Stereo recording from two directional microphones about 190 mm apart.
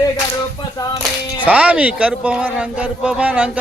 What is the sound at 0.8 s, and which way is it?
Clapping, 20° left (ahead or behind).